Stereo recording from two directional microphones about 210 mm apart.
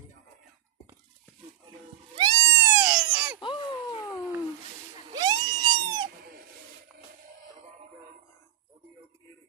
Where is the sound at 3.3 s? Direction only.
20° left (ahead or behind).